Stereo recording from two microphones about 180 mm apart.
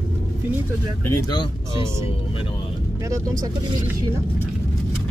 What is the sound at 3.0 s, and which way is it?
Speech, 20° right (ahead or behind).